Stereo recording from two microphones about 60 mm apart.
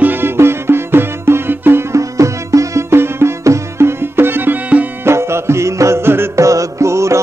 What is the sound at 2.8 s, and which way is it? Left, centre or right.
Music, right.